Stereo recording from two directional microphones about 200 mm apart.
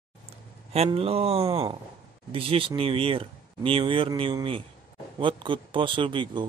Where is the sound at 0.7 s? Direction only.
30° right (ahead or behind).